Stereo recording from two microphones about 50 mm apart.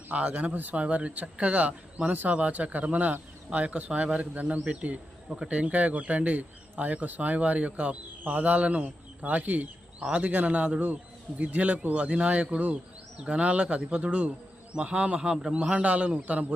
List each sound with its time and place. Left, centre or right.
0.1 s speech: right
0.5 s speech: right
8.2 s a man's voice: right; by 15.7 s centre
15.7 s speech: right